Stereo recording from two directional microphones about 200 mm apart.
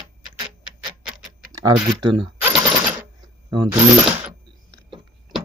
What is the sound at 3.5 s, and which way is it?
Speech, 20° right (ahead or behind).